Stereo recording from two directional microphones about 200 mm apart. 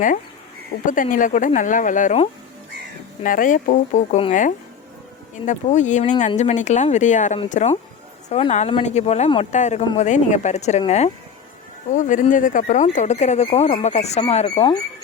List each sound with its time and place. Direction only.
0.9 s speech: 40° left (ahead or behind)